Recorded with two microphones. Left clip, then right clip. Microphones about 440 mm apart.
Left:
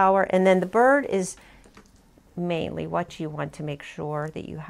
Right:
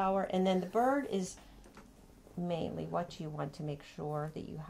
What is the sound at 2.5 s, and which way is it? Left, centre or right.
Speech, left.